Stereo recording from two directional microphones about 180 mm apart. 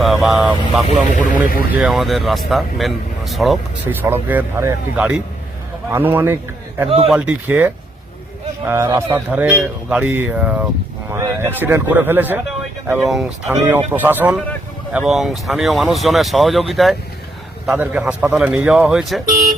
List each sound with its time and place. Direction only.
0.0 s speech: centre (ahead or behind)
1.1 s speech: 50° left (ahead or behind)
1.8 s speech: centre (ahead or behind)
4.0 s a man's voice: 10° right (ahead or behind)
11.1 s a sound: 15° right (ahead or behind)
11.6 s a man's voice: 10° right (ahead or behind)